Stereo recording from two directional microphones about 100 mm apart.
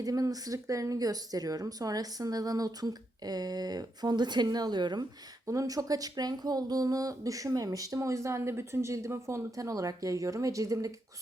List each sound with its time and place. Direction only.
0.0 s speech: 35° right (ahead or behind)
5.5 s speech: 35° right (ahead or behind)